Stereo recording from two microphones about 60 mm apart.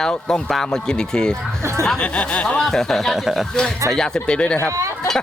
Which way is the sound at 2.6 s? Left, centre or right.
Centre.